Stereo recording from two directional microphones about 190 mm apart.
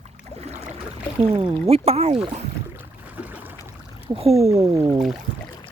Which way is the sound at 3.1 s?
10° right (ahead or behind).